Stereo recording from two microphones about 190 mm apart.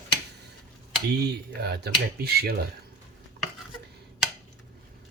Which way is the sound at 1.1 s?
60° right (ahead or behind).